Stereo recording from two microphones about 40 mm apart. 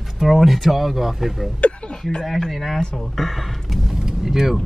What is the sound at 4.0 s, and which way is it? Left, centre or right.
Vehicle, centre.